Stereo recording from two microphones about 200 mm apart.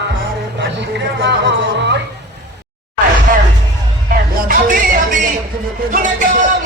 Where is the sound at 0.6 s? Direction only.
60° right (ahead or behind).